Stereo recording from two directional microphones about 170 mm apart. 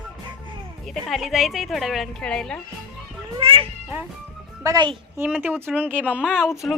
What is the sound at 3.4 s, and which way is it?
Cat, 30° right (ahead or behind).